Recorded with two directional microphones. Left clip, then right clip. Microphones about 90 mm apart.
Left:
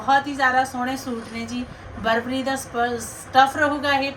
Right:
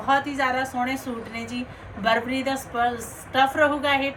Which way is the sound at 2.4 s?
30° left (ahead or behind).